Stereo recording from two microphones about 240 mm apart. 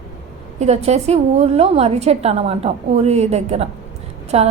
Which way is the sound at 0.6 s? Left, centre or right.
Right.